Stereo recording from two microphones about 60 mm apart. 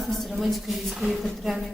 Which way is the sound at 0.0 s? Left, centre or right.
Centre.